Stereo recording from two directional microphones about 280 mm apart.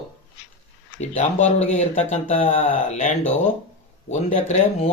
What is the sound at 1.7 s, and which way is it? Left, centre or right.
Speech, left.